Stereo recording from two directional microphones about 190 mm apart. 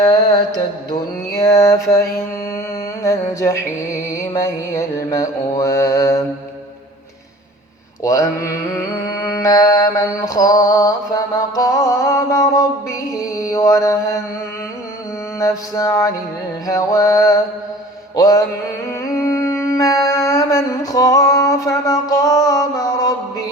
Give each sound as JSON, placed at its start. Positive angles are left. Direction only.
{"t": 0.0, "sound": "mantra", "side_deg": 20}
{"t": 0.9, "sound": "music", "side_deg": 15}
{"t": 8.0, "sound": "mantra", "side_deg": 15}
{"t": 15.4, "sound": "music", "side_deg": 15}
{"t": 18.2, "sound": "mantra", "side_deg": 20}